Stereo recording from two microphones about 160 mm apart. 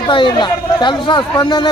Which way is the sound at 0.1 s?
30° left (ahead or behind).